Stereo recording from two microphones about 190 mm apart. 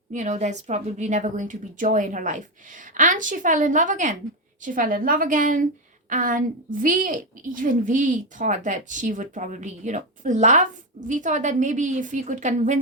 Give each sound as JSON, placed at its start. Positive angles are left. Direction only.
{"t": 0.1, "sound": "a woman's voice", "side_deg": -40}